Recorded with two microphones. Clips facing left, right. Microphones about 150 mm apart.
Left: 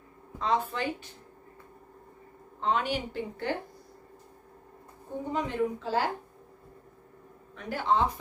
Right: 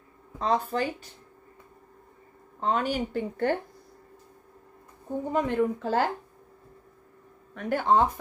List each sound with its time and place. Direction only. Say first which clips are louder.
0.4 s speech: right 3 dB; 40° right (ahead or behind)
2.6 s a woman's voice: right 2 dB; 45° right (ahead or behind)
5.3 s a woman's voice: right 4 dB; 55° right (ahead or behind)
7.5 s a woman's voice: right 4 dB; 50° right (ahead or behind)